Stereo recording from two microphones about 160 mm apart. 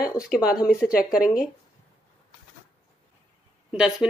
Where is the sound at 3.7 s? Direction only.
5° right (ahead or behind).